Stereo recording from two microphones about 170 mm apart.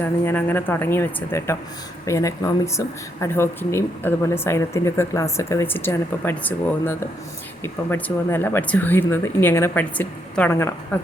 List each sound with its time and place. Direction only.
0.0 s speech: 10° left (ahead or behind)